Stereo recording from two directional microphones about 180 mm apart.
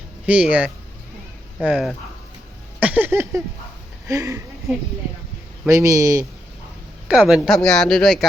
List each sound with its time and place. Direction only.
0.3 s speech: 10° right (ahead or behind)
2.8 s a sound: 10° right (ahead or behind)
4.1 s speech: 15° right (ahead or behind)
5.6 s speech: 15° right (ahead or behind)
7.1 s speech: 5° right (ahead or behind)